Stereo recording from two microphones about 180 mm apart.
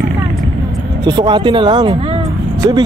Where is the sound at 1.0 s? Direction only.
25° right (ahead or behind).